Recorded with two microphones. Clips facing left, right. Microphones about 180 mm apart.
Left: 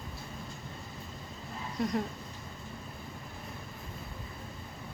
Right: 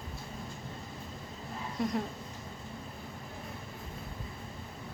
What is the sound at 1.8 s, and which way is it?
Speech, centre (ahead or behind).